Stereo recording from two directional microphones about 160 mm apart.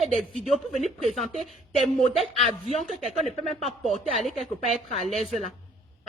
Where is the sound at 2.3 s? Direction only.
40° left (ahead or behind).